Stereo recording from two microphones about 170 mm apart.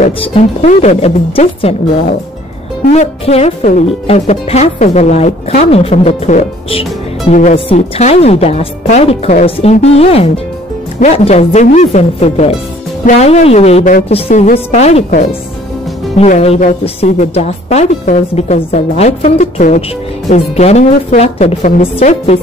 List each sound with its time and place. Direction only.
0.2 s a woman's voice: 35° left (ahead or behind)